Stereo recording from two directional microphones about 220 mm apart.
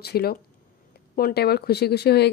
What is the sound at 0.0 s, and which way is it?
Speech, 45° left (ahead or behind).